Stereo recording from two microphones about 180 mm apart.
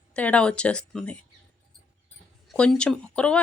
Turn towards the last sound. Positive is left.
turn(degrees=5)  # may be behind; listen again after turning